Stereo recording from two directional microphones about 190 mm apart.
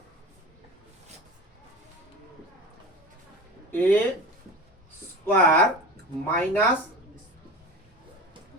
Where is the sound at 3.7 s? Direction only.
10° left (ahead or behind).